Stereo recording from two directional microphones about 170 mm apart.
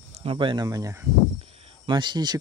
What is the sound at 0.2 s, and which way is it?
Speech, 30° right (ahead or behind).